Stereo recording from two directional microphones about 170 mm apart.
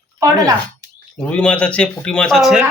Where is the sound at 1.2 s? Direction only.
5° left (ahead or behind).